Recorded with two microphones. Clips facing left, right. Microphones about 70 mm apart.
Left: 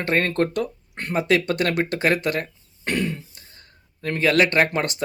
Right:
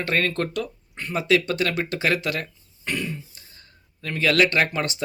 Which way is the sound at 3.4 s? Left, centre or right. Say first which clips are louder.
Left 1 dB; left.